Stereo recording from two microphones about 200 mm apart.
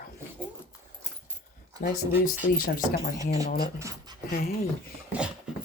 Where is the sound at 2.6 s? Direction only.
50° left (ahead or behind).